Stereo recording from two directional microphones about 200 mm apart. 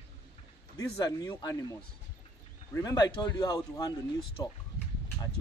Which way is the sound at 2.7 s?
20° left (ahead or behind).